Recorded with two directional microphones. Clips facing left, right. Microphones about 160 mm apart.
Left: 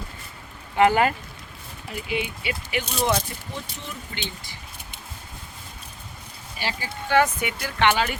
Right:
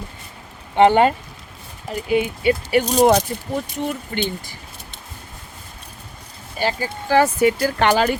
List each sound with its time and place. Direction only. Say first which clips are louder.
0.8 s speech: right 5 dB; 30° right (ahead or behind)
1.9 s speech: right 9 dB; 45° right (ahead or behind)
3.5 s speech: right 13 dB; 55° right (ahead or behind)
6.6 s speech: right 8 dB; 45° right (ahead or behind)